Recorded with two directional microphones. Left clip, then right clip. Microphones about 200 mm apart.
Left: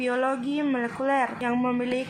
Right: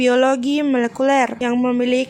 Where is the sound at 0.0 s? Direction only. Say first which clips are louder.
Right 10 dB; 60° right (ahead or behind).